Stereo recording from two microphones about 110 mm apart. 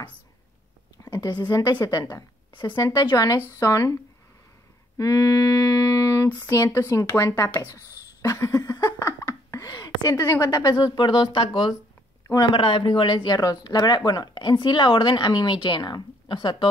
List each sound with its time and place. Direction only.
1.0 s speech: 35° left (ahead or behind)
2.5 s speech: 45° left (ahead or behind)
2.8 s speech: 35° left (ahead or behind)
4.9 s a sound: 30° left (ahead or behind)
6.2 s speech: 20° left (ahead or behind)
8.2 s a sound: 30° left (ahead or behind)
10.2 s speech: 25° left (ahead or behind)
10.5 s speech: 40° left (ahead or behind)